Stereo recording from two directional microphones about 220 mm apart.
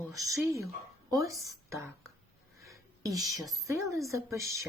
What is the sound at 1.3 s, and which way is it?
Speech, 15° right (ahead or behind).